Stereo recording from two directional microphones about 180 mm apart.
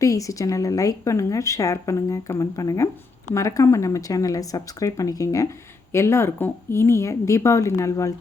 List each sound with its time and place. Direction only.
0.0 s speech: 20° left (ahead or behind)